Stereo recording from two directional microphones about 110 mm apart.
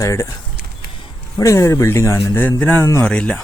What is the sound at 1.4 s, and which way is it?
Speech, 25° left (ahead or behind).